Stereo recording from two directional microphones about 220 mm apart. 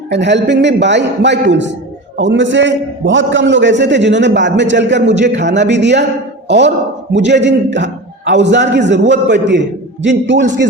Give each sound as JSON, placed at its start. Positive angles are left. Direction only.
{"t": 0.1, "sound": "a man's voice", "side_deg": -50}